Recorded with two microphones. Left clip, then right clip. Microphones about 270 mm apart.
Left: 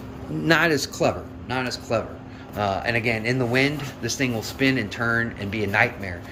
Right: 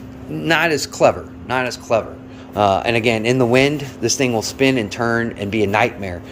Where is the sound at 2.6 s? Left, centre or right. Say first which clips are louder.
Right 8 dB; right.